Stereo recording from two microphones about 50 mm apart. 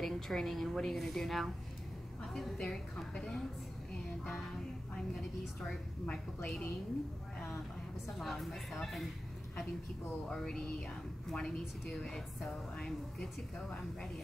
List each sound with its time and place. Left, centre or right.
0.0 s a woman's voice: centre
2.5 s a woman's voice: centre
6.0 s a woman's voice: centre
8.2 s a woman's voice: centre
10.3 s a woman's voice: centre
12.7 s a woman's voice: centre